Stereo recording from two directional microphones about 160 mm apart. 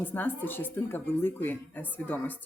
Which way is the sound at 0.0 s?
10° left (ahead or behind).